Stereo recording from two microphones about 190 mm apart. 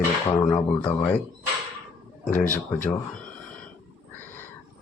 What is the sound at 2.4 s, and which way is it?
Speech, 45° left (ahead or behind).